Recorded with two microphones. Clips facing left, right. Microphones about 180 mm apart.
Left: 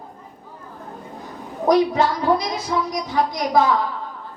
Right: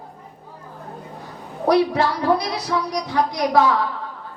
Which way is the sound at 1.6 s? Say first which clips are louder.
Left 1 dB; 70° right (ahead or behind).